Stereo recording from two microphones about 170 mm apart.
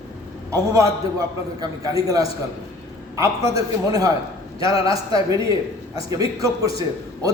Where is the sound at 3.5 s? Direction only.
20° right (ahead or behind).